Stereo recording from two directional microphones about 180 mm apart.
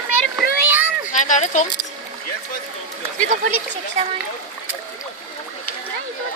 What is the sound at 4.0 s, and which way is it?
Speech, 35° right (ahead or behind).